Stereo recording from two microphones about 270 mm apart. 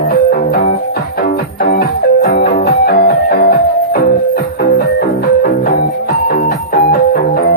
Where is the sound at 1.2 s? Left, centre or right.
Left.